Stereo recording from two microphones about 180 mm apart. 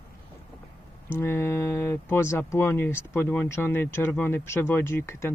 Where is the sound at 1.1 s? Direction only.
15° left (ahead or behind).